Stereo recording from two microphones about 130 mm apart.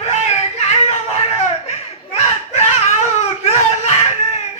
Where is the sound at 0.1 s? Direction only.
55° left (ahead or behind).